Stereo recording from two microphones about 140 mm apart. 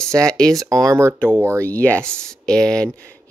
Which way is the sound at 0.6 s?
25° right (ahead or behind).